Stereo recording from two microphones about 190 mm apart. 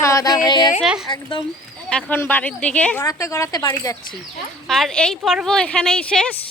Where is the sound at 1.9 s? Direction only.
10° left (ahead or behind).